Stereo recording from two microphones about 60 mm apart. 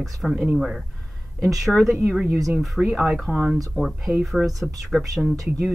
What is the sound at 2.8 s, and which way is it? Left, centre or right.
Speech, centre.